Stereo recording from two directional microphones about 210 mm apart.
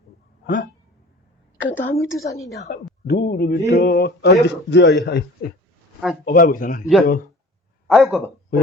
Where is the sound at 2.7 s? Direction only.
50° left (ahead or behind).